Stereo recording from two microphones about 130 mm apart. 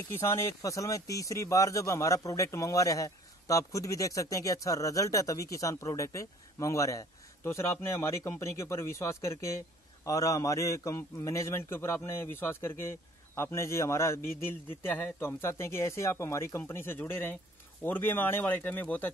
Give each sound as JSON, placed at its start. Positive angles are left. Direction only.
{"t": 0.1, "sound": "speech", "side_deg": 20}